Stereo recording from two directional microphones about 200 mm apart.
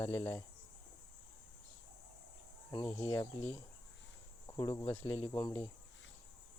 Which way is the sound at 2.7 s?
20° left (ahead or behind).